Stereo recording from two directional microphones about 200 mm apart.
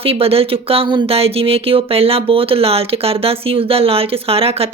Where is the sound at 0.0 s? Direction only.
30° right (ahead or behind).